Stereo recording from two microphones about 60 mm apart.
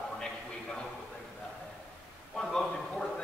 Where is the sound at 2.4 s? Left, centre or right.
Centre.